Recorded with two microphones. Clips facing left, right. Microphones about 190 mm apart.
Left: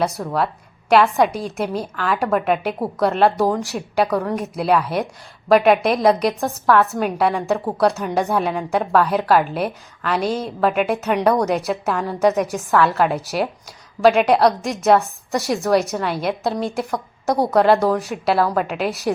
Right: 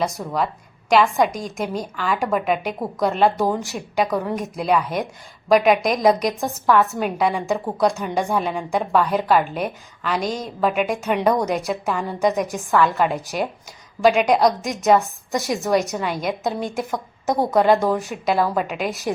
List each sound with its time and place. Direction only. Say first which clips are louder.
0.3 s a woman's voice: left 2 dB; 5° left (ahead or behind)
17.7 s speech: left 1 dB; 15° right (ahead or behind)
17.9 s a woman's voice: left 2 dB; centre (ahead or behind)